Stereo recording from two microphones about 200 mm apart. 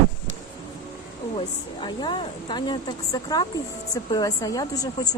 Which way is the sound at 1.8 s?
25° left (ahead or behind).